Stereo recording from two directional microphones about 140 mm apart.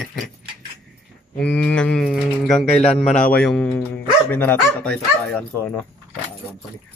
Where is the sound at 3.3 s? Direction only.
5° left (ahead or behind).